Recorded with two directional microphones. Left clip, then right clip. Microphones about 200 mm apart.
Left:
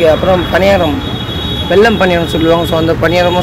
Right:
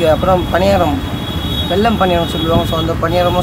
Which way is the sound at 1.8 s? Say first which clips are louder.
Left 3 dB; 10° left (ahead or behind).